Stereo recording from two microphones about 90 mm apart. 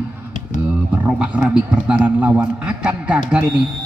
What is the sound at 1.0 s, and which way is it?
A man's voice, 15° right (ahead or behind).